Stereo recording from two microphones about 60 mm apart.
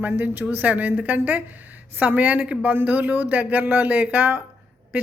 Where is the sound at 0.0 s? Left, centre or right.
Right.